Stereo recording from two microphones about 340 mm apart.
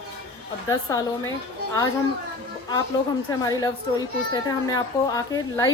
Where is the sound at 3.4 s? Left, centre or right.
Centre.